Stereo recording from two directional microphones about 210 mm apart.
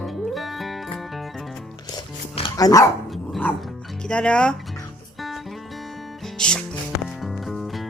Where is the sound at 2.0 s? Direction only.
20° left (ahead or behind).